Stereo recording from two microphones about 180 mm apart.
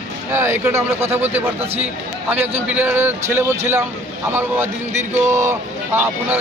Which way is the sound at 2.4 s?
10° right (ahead or behind).